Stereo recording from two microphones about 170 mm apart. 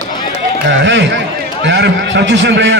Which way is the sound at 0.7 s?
90° right.